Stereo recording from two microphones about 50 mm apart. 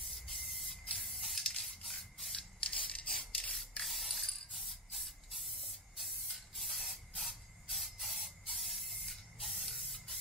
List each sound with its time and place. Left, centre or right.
0.0 s spray: centre
1.9 s rub: centre
2.6 s rub: left
3.8 s spray: centre